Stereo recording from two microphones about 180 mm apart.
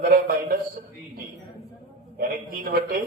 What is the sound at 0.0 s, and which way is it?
Speech, 55° right (ahead or behind).